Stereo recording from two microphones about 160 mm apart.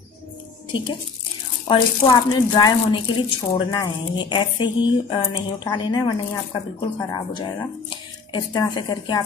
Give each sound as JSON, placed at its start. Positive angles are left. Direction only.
{"t": 1.7, "sound": "speech", "side_deg": 30}